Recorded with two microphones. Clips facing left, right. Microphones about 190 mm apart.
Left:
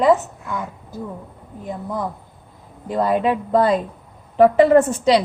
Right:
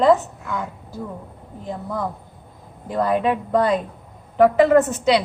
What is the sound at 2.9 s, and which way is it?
A woman's voice, 20° left (ahead or behind).